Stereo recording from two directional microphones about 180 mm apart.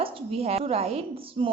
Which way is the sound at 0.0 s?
30° right (ahead or behind).